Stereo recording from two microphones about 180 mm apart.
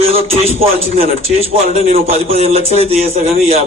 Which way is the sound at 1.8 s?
35° right (ahead or behind).